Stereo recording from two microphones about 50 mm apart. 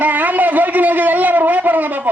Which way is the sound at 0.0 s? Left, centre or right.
Right.